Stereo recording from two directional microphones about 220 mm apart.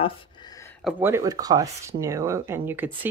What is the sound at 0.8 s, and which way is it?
Speech, 5° right (ahead or behind).